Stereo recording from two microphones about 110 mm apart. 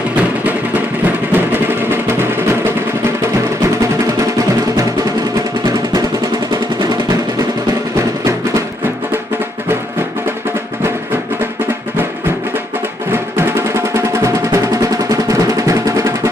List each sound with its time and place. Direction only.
0.2 s music: 15° right (ahead or behind)
13.9 s music: 25° right (ahead or behind)